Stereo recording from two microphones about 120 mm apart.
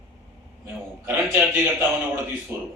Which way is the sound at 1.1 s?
20° right (ahead or behind).